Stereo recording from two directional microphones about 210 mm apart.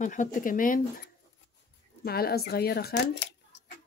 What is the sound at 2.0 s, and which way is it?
Speech, 50° left (ahead or behind).